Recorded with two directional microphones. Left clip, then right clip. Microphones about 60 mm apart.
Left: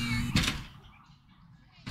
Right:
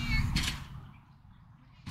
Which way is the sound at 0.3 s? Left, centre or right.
Left.